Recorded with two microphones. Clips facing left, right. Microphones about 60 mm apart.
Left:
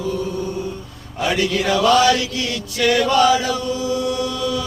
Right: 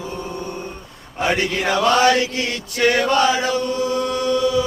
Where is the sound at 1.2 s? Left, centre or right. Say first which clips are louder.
Even; right.